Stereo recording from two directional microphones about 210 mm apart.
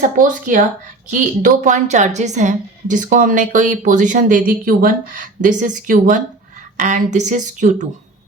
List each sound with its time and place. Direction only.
0.2 s a woman's voice: 40° right (ahead or behind)